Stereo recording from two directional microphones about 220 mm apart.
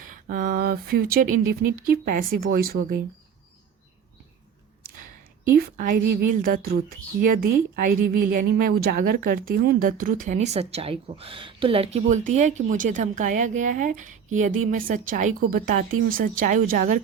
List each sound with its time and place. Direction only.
0.0 s a woman's voice: 35° right (ahead or behind)
5.5 s a woman's voice: 40° right (ahead or behind)